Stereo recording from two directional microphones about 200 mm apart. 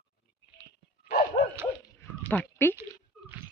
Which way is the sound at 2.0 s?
10° left (ahead or behind).